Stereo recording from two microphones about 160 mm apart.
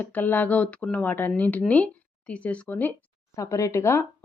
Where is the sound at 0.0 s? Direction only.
10° left (ahead or behind).